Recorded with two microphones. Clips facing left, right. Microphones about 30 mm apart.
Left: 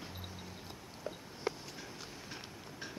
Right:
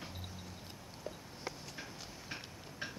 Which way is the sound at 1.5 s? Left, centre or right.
Centre.